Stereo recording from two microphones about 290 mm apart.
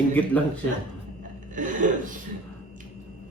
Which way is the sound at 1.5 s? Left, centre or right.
Right.